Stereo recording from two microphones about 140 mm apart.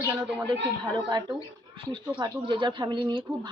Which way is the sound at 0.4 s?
30° right (ahead or behind).